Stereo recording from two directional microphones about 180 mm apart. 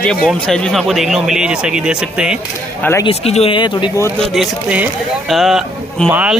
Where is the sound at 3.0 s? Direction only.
35° left (ahead or behind).